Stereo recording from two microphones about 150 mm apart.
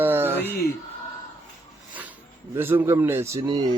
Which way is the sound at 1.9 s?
10° right (ahead or behind).